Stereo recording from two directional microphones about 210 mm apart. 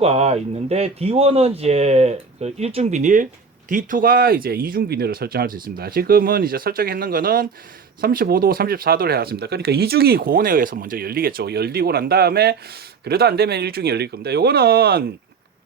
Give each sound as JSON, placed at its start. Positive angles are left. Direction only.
{"t": 0.0, "sound": "speech", "side_deg": -30}